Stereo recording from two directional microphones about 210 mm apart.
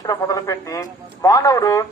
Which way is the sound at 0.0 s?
15° left (ahead or behind).